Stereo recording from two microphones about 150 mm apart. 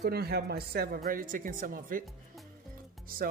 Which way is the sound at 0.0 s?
90° right.